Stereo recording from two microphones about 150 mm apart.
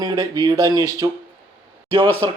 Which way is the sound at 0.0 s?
25° right (ahead or behind).